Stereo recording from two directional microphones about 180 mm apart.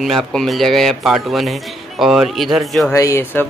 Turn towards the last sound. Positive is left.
turn(degrees=15)  # may be behind; listen again after turning